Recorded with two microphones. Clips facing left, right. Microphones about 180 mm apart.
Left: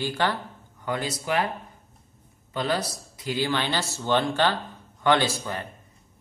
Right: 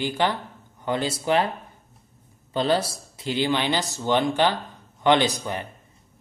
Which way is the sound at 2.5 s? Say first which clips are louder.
Right 4 dB; 30° right (ahead or behind).